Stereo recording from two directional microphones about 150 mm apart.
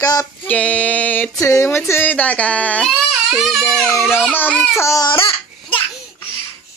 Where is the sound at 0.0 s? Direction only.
25° left (ahead or behind).